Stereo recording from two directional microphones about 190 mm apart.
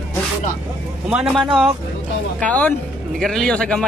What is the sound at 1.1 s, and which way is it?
A man's voice, 5° right (ahead or behind).